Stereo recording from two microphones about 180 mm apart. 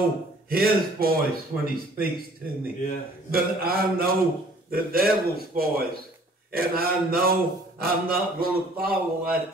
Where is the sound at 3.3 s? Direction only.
55° right (ahead or behind).